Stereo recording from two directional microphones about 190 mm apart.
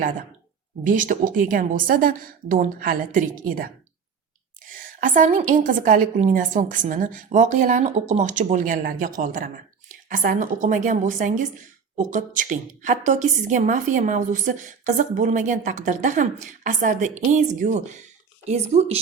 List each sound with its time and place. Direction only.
0.9 s a woman's voice: 45° right (ahead or behind)